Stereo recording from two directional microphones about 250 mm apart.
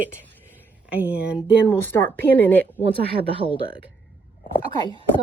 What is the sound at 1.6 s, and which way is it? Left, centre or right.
Speech, centre.